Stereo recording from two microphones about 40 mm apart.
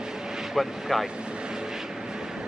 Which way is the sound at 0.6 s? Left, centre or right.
Centre.